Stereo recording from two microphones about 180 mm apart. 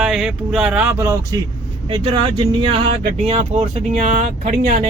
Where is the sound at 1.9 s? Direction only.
30° right (ahead or behind); by 4.9 s 45° right (ahead or behind).